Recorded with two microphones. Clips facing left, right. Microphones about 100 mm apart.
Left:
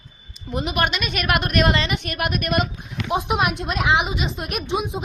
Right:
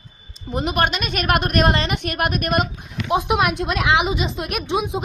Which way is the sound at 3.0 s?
65° right (ahead or behind).